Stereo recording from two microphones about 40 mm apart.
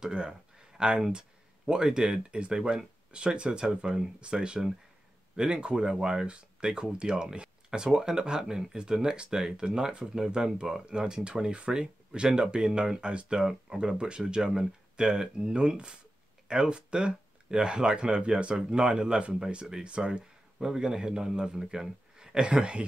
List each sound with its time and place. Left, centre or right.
0.0 s speech: right
20.5 s speech: centre